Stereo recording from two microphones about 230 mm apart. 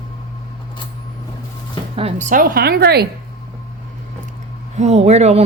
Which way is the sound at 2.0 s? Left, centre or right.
Right.